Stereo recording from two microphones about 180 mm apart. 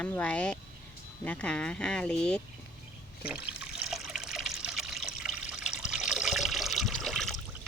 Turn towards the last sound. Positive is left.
turn(degrees=0)  # may be behind; listen again after turning